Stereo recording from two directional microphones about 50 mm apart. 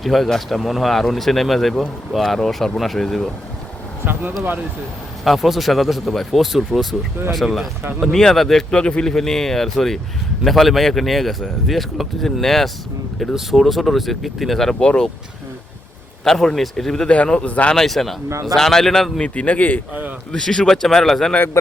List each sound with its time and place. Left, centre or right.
0.0 s speech: centre
4.0 s speech: right
5.2 s speech: centre
8.7 s speech: centre
13.1 s speech: centre
14.8 s speech: centre
16.2 s speech: centre
17.4 s speech: left
17.7 s speech: centre
19.2 s a man's voice: left
19.9 s a man's voice: right
20.3 s speech: centre